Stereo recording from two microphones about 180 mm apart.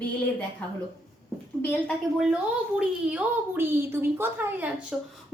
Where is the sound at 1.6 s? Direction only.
Centre (ahead or behind).